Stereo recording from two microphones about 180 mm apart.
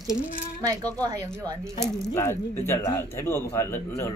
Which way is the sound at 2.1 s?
15° left (ahead or behind).